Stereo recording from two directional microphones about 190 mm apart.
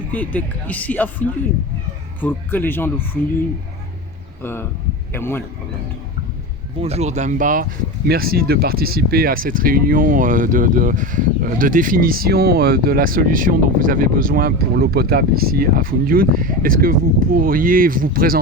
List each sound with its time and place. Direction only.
0.1 s speech: 10° left (ahead or behind)
5.1 s speech: 10° left (ahead or behind)
6.7 s speech: 35° right (ahead or behind); by 18.3 s 50° right (ahead or behind)